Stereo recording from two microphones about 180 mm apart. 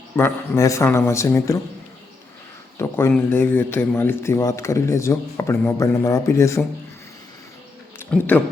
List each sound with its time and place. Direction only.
0.2 s speech: 15° left (ahead or behind)
2.7 s a sound: 15° left (ahead or behind)
3.2 s speech: 10° left (ahead or behind)
7.9 s speech: 10° left (ahead or behind)